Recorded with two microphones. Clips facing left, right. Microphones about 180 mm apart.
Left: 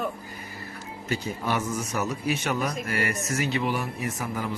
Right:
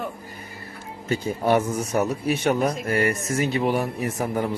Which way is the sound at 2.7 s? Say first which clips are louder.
Right 6 dB; 50° right (ahead or behind).